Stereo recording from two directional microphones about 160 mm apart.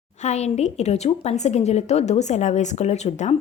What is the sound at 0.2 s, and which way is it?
A woman's voice, 45° left (ahead or behind).